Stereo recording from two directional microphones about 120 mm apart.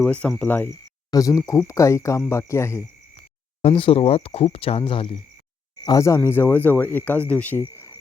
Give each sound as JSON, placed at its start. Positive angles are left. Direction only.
{"t": 0.0, "sound": "speech", "side_deg": 10}
{"t": 1.1, "sound": "speech", "side_deg": 30}
{"t": 3.6, "sound": "speech", "side_deg": 50}
{"t": 6.0, "sound": "speech", "side_deg": 25}